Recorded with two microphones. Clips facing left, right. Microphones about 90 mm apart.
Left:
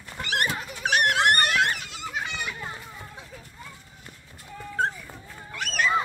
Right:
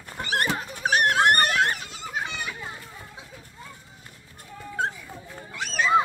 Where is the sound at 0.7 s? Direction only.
35° right (ahead or behind).